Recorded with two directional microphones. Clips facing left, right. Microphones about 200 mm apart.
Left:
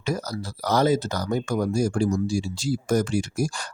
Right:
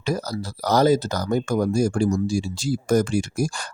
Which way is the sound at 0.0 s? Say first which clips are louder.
Right 2 dB; 35° right (ahead or behind).